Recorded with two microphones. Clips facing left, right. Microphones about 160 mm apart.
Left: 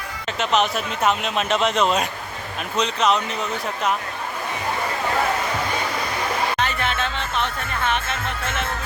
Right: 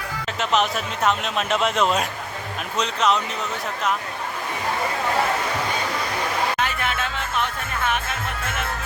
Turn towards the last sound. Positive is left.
turn(degrees=-10)  # may be behind; listen again after turning